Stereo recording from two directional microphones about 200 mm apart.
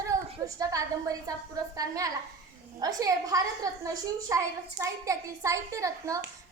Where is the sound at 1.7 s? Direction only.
15° right (ahead or behind).